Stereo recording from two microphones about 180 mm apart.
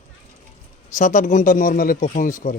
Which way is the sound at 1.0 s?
45° left (ahead or behind).